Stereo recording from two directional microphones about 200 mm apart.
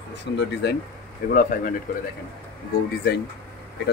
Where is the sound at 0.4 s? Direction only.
60° left (ahead or behind).